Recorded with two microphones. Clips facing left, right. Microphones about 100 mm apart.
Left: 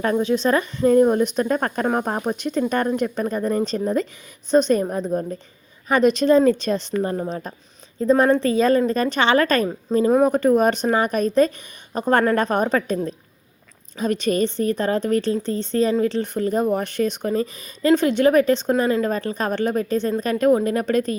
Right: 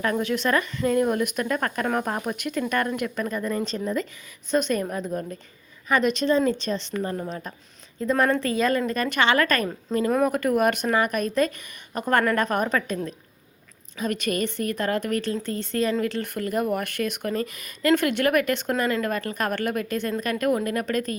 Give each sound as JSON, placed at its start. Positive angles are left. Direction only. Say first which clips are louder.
{"t": 0.0, "sound": "a woman's voice", "louder": "left 5 dB", "side_deg": 25}
{"t": 7.0, "sound": "a woman's voice", "louder": "left 5 dB", "side_deg": 30}